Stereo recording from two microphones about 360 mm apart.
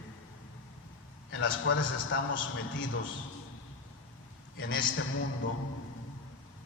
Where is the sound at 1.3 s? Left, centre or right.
Left.